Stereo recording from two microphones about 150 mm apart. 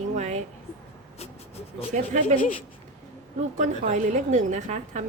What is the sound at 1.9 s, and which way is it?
Speech, 55° right (ahead or behind).